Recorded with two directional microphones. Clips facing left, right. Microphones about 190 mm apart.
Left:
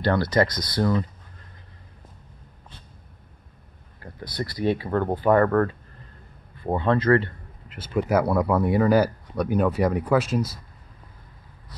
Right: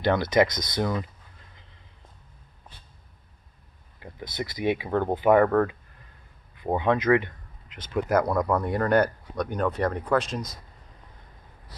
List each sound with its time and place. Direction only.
0.0 s speech: 20° right (ahead or behind)
4.0 s speech: 20° right (ahead or behind)
5.5 s speech: 5° right (ahead or behind)
6.5 s speech: 15° right (ahead or behind)
7.6 s speech: 5° left (ahead or behind)